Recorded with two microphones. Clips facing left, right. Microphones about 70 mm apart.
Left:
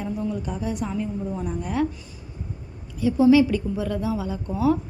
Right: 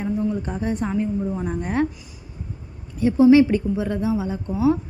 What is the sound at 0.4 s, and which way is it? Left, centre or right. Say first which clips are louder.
A woman's voice: right 3 dB; right.